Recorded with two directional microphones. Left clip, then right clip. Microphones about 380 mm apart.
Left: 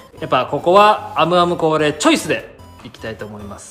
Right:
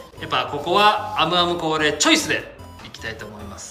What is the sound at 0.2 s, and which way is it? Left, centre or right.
A man's voice, centre.